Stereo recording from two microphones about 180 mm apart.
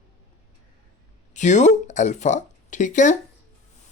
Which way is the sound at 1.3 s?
40° left (ahead or behind).